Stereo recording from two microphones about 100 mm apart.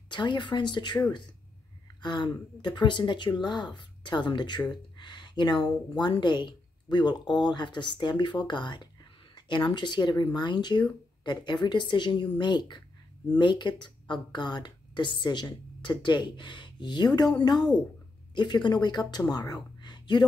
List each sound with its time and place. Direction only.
0.1 s speech: 50° left (ahead or behind)
19.3 s whispering: 40° left (ahead or behind)